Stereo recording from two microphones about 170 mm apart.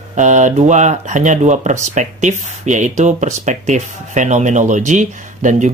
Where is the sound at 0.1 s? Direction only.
45° right (ahead or behind).